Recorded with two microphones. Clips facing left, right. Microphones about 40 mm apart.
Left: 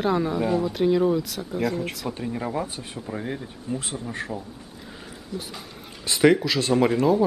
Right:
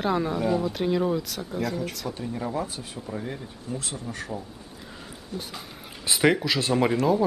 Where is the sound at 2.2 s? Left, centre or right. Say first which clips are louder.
Left 1 dB; left.